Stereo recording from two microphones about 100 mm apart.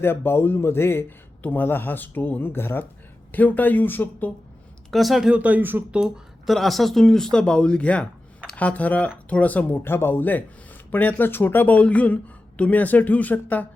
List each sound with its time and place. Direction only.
0.0 s a man's voice: 20° left (ahead or behind)
4.9 s speech: centre (ahead or behind); by 6.0 s 20° right (ahead or behind)
6.0 s speech: centre (ahead or behind); by 13.7 s 15° left (ahead or behind)